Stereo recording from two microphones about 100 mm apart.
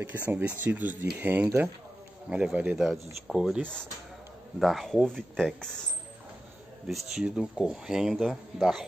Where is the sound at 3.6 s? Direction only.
10° left (ahead or behind).